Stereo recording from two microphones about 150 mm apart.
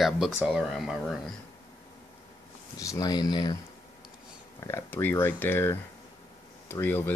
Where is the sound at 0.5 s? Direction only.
Centre (ahead or behind).